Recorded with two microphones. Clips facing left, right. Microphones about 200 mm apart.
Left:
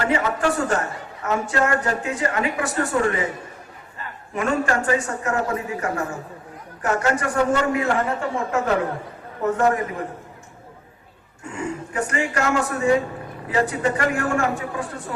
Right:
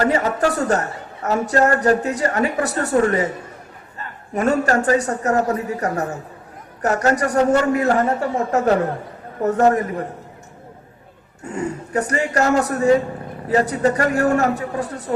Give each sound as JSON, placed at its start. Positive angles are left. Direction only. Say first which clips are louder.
{"t": 0.0, "sound": "a man's voice", "louder": "right 3 dB", "side_deg": -40}
{"t": 4.4, "sound": "a man's voice", "louder": "right 4 dB", "side_deg": -40}
{"t": 11.4, "sound": "a man's voice", "louder": "right 3 dB", "side_deg": -40}